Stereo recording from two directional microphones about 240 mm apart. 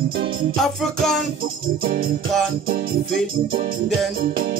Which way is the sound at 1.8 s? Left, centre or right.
Right.